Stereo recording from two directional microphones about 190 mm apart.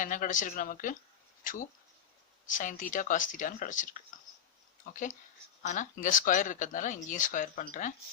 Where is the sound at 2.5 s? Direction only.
45° left (ahead or behind).